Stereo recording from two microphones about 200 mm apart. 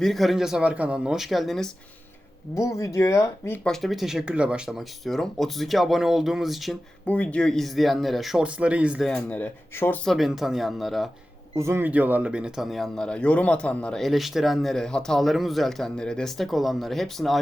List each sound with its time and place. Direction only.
0.0 s speech: centre (ahead or behind)
2.6 s speech: 15° left (ahead or behind); by 11.1 s centre (ahead or behind)
11.5 s speech: 15° right (ahead or behind)